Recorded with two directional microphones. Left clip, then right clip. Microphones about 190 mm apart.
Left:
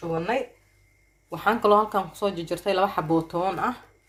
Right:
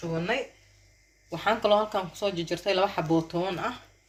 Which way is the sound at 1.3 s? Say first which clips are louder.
Left 3 dB; 45° left (ahead or behind).